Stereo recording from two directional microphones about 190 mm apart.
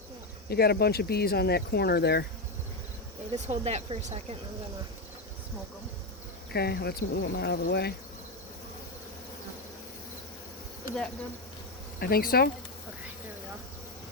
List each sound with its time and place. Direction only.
0.4 s speech: 55° left (ahead or behind)
3.3 s speech: 35° right (ahead or behind)
6.5 s speech: 60° left (ahead or behind)
11.9 s speech: 55° left (ahead or behind)